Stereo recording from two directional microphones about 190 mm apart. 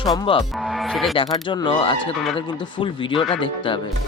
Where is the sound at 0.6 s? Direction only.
Centre (ahead or behind).